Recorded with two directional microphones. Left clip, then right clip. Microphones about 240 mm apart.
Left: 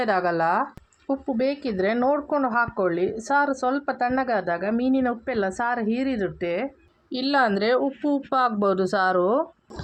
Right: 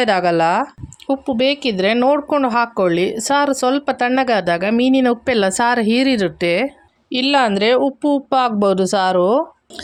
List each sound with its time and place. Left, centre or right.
0.0 s speech: right
1.8 s speech: right
7.2 s speech: right